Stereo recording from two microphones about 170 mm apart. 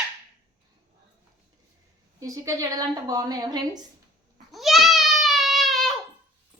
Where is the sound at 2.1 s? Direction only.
20° right (ahead or behind).